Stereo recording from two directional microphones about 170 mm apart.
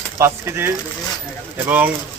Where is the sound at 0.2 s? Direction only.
15° right (ahead or behind).